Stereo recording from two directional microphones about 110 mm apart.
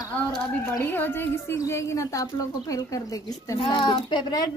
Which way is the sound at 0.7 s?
20° left (ahead or behind).